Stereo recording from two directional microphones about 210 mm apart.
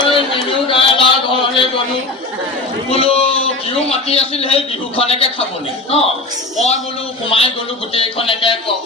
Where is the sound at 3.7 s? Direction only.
30° left (ahead or behind).